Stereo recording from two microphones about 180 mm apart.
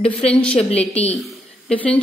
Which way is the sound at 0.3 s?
5° left (ahead or behind).